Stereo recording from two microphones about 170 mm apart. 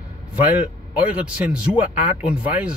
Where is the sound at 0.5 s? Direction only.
10° right (ahead or behind).